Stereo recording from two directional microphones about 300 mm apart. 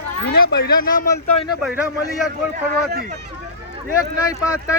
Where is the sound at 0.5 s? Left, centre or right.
Left.